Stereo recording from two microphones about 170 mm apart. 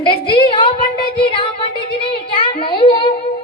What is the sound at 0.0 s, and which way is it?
Speech, 30° left (ahead or behind).